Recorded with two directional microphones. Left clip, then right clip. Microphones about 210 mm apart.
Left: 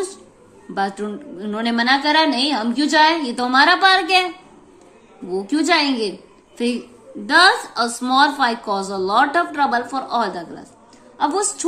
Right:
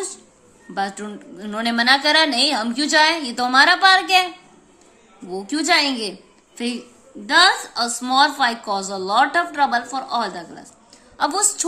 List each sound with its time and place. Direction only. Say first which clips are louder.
0.7 s a woman's voice: left 3 dB; 10° right (ahead or behind)
5.3 s a woman's voice: left 1 dB; 10° right (ahead or behind)
7.2 s a woman's voice: left 2 dB; 5° right (ahead or behind)